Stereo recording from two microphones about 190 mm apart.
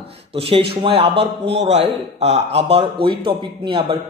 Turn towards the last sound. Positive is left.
turn(degrees=-25)  # may be behind; listen again after turning